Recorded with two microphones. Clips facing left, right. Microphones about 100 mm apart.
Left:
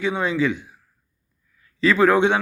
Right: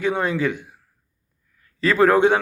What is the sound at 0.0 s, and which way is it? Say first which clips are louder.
Speech: even; 50° right (ahead or behind).